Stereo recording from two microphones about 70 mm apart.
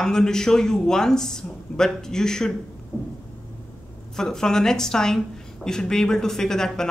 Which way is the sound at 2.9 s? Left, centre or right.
Left.